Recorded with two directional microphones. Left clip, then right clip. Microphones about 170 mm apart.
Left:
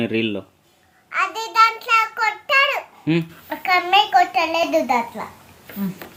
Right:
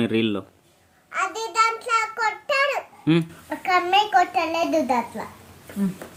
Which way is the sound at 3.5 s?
25° right (ahead or behind).